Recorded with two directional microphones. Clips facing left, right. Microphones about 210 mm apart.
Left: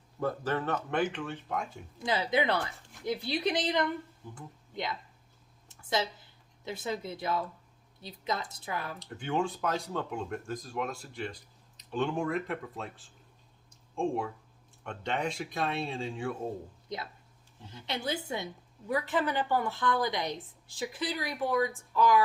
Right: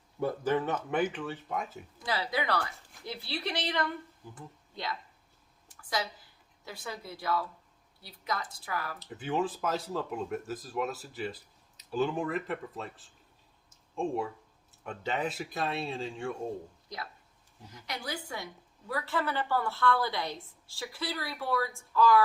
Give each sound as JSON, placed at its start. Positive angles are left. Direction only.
{"t": 0.2, "sound": "speech", "side_deg": -15}
{"t": 2.0, "sound": "speech", "side_deg": 20}
{"t": 5.6, "sound": "a sound", "side_deg": 25}
{"t": 6.7, "sound": "speech", "side_deg": 20}
{"t": 9.0, "sound": "speech", "side_deg": -5}
{"t": 13.7, "sound": "a sound", "side_deg": 0}
{"t": 14.8, "sound": "speech", "side_deg": -5}
{"t": 16.9, "sound": "a woman's voice", "side_deg": 20}